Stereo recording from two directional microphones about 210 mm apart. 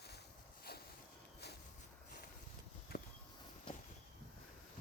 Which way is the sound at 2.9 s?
45° left (ahead or behind).